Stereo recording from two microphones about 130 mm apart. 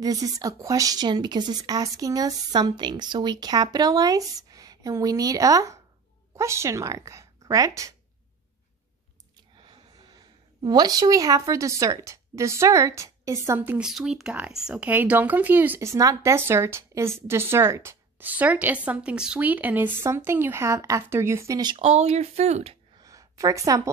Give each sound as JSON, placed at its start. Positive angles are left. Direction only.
{"t": 0.0, "sound": "speech", "side_deg": -30}
{"t": 9.6, "sound": "a woman's voice", "side_deg": -35}
{"t": 21.7, "sound": "speech", "side_deg": -50}
{"t": 22.9, "sound": "a sound", "side_deg": -25}